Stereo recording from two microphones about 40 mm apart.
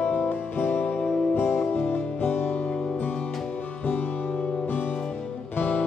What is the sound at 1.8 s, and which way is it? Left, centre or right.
Music, left.